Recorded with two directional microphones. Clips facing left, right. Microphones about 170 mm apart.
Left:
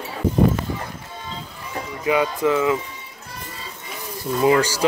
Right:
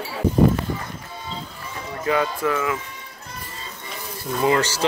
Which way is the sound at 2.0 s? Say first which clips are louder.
Left 2 dB; 15° left (ahead or behind).